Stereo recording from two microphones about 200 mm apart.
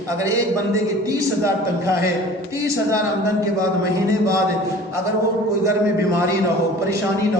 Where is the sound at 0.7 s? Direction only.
15° right (ahead or behind).